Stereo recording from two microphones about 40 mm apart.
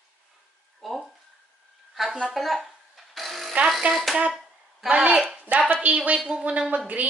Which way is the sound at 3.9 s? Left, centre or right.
Centre.